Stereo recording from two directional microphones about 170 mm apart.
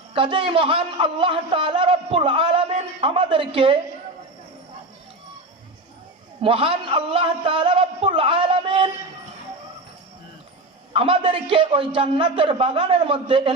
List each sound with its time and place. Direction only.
0.1 s a man's voice: 30° right (ahead or behind)
6.4 s a man's voice: 30° right (ahead or behind)
10.9 s a man's voice: 30° right (ahead or behind)